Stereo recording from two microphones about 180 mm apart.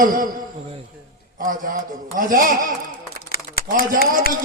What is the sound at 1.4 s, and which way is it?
Speech, 50° right (ahead or behind).